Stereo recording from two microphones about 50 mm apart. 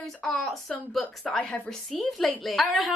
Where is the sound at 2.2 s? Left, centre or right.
Centre.